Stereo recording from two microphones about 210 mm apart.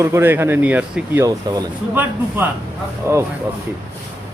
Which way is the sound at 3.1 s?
15° right (ahead or behind).